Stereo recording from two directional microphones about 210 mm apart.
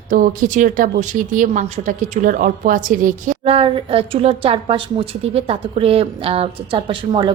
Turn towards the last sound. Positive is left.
turn(degrees=-25)  # may be behind; listen again after turning